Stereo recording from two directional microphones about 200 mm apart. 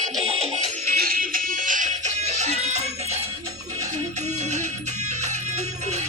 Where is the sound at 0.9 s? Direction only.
45° right (ahead or behind).